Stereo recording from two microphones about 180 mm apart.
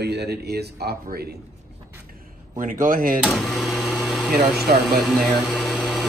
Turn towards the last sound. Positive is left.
turn(degrees=0)  # may be behind; listen again after turning